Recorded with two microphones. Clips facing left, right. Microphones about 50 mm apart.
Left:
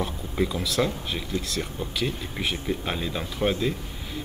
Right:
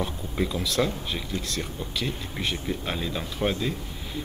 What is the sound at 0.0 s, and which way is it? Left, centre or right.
Speech, centre.